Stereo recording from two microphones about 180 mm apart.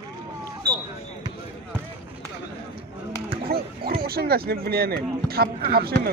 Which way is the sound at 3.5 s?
60° right (ahead or behind).